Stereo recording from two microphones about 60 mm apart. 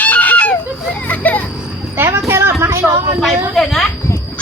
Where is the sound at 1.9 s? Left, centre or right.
Right.